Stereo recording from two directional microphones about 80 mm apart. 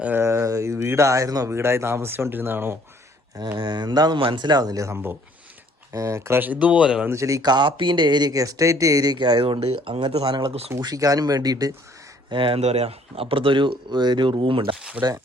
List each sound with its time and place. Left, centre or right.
0.2 s a sound: right
1.5 s speech: right
3.6 s speech: right
4.9 s speech: right
5.9 s speech: right
6.4 s speech: centre
7.1 s speech: right
7.4 s speech: right
8.3 s speech: right
10.8 s speech: right
12.3 s speech: right
15.0 s speech: centre